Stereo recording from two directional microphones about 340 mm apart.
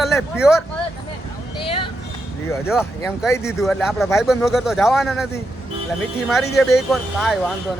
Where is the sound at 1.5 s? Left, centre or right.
Centre.